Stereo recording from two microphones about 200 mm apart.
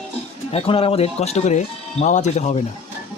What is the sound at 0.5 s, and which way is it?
Speech, 30° left (ahead or behind).